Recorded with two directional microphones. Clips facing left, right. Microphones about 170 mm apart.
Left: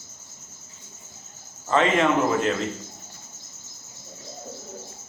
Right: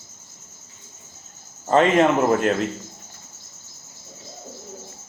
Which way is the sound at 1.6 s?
40° right (ahead or behind).